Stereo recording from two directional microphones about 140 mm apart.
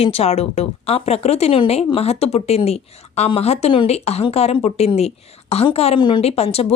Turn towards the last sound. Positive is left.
turn(degrees=45)  # may be behind; listen again after turning